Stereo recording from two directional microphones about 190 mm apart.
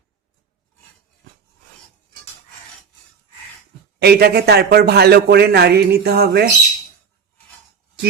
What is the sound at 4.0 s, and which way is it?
A man's voice, 55° right (ahead or behind).